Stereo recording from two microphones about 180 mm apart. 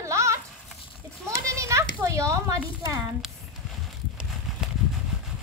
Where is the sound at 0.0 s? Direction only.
15° right (ahead or behind).